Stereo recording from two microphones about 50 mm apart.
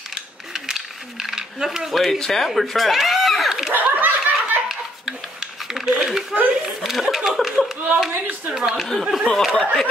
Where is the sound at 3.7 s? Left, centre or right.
Right.